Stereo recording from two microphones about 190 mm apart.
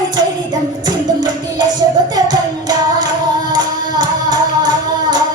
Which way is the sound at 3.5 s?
20° right (ahead or behind).